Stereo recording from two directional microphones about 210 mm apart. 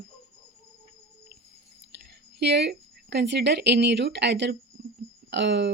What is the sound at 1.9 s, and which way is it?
A woman's voice, 55° right (ahead or behind).